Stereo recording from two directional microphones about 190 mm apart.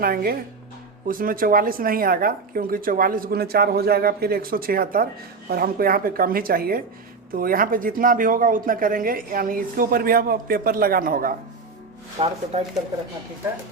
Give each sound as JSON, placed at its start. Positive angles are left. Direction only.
{"t": 0.0, "sound": "speech", "side_deg": -50}
{"t": 12.2, "sound": "speech", "side_deg": -30}